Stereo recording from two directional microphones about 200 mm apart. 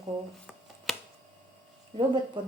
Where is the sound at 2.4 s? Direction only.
25° right (ahead or behind).